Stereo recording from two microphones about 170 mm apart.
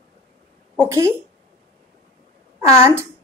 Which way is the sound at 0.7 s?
15° right (ahead or behind).